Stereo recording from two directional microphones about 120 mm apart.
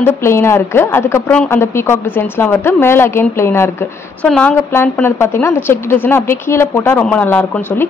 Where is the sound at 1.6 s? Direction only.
20° left (ahead or behind).